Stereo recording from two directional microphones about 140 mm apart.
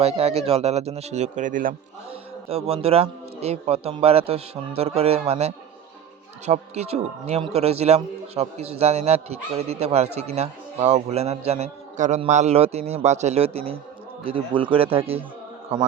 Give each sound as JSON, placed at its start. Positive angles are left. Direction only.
{"t": 0.0, "sound": "speech", "side_deg": -50}
{"t": 2.0, "sound": "a man's voice", "side_deg": -45}